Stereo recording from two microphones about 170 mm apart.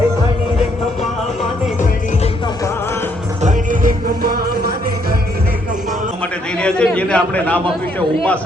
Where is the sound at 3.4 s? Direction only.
50° right (ahead or behind).